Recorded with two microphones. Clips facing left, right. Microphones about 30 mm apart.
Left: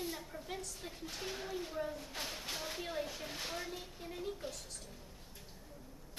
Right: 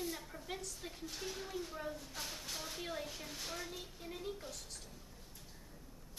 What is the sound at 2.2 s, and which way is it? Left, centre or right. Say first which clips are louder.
Speech: left 5 dB; left.